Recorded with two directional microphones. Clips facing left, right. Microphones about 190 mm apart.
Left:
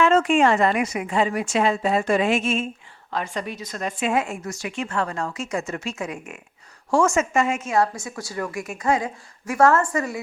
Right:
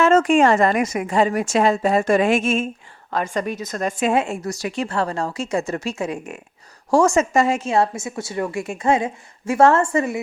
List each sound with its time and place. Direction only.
0.0 s a woman's voice: 45° right (ahead or behind)
4.1 s a woman's voice: 30° right (ahead or behind)